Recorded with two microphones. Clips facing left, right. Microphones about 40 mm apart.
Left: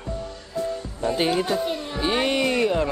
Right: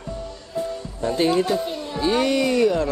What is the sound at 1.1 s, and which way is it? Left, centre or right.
Speech, centre.